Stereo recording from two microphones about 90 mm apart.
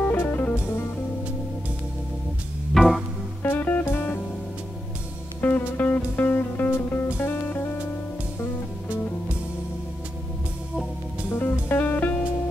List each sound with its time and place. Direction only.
0.1 s music: 25° left (ahead or behind)
2.7 s music: centre (ahead or behind)
3.4 s music: 20° left (ahead or behind)
5.4 s music: 20° left (ahead or behind)
11.3 s music: 25° left (ahead or behind)